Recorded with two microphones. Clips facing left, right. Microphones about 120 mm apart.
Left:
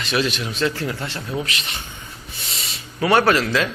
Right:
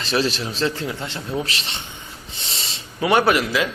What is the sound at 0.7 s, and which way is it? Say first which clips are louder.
Speech: left 1 dB; 20° right (ahead or behind).